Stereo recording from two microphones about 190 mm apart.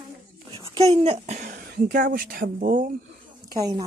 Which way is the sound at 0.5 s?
25° right (ahead or behind).